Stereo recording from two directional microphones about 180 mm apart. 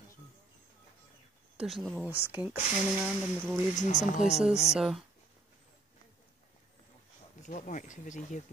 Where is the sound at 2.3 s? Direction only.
10° right (ahead or behind).